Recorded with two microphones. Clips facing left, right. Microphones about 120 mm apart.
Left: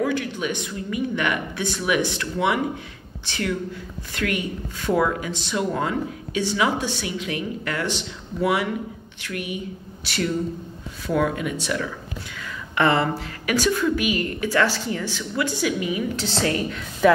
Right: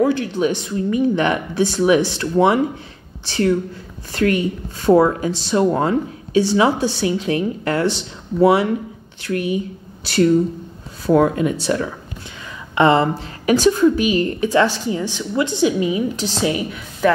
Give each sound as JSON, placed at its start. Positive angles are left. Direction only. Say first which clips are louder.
{"t": 0.0, "sound": "speech", "louder": "right 7 dB", "side_deg": -30}
{"t": 11.1, "sound": "a woman's voice", "louder": "right 8 dB", "side_deg": -35}
{"t": 17.0, "sound": "speech", "louder": "even", "side_deg": 0}